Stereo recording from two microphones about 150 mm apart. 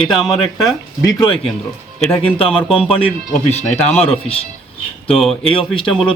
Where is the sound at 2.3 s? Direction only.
40° left (ahead or behind).